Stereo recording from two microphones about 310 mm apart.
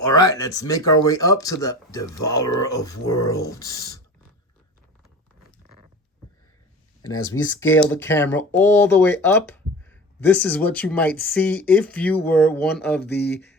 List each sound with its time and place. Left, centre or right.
0.2 s speech: centre
7.1 s speech: centre
13.0 s speech: left